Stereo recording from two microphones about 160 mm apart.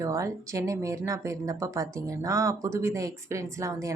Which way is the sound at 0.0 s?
20° right (ahead or behind).